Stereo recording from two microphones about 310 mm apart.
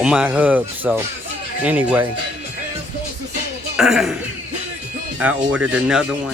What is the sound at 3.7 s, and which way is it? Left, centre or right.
Speech, centre.